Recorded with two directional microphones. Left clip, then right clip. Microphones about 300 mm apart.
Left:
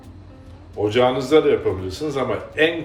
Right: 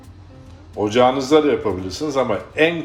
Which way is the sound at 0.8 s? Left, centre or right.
Right.